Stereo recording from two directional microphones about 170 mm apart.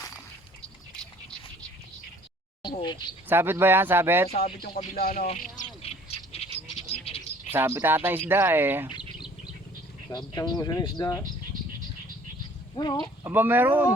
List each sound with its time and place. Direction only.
2.6 s a sound: 25° left (ahead or behind)
3.2 s speech: 15° right (ahead or behind)
4.9 s speech: 60° left (ahead or behind)
5.8 s bird: 35° left (ahead or behind)
7.5 s speech: 15° right (ahead or behind)
9.0 s bird: 5° right (ahead or behind)
10.1 s speech: 20° left (ahead or behind)
12.7 s speech: 25° left (ahead or behind)
13.2 s speech: 10° right (ahead or behind)